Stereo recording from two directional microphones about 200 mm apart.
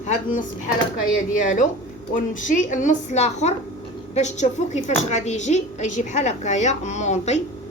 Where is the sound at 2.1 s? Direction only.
40° left (ahead or behind).